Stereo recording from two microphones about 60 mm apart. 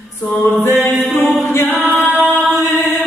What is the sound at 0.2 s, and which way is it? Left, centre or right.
Music, left.